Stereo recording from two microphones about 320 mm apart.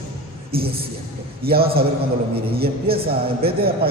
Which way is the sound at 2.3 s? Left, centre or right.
Right.